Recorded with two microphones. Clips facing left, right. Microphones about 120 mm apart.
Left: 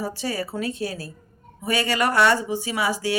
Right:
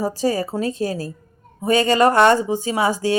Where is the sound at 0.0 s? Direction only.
40° right (ahead or behind).